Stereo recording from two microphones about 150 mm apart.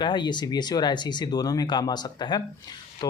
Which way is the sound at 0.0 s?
30° left (ahead or behind).